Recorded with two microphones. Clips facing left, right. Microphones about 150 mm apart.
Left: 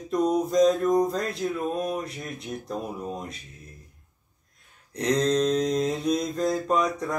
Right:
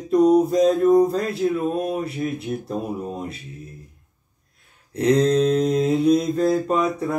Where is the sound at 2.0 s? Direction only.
5° right (ahead or behind).